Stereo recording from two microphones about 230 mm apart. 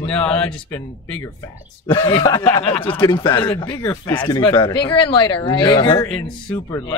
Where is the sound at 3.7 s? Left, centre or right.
Centre.